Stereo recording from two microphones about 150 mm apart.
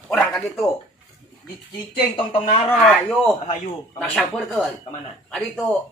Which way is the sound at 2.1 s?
45° left (ahead or behind).